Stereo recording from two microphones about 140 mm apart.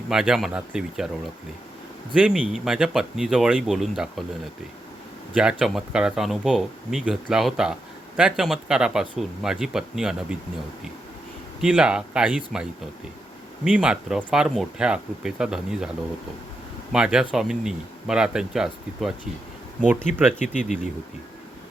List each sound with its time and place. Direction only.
0.1 s speech: 5° right (ahead or behind)
5.3 s speech: 5° right (ahead or behind)
11.6 s speech: 5° right (ahead or behind)
13.7 s speech: 10° right (ahead or behind)
16.9 s speech: 5° right (ahead or behind)
20.1 s speech: 60° left (ahead or behind)